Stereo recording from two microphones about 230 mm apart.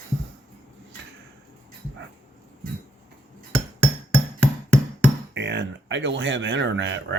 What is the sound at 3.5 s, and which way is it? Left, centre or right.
Music, centre.